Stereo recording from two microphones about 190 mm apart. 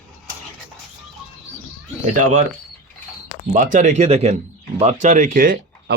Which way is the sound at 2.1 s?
40° right (ahead or behind).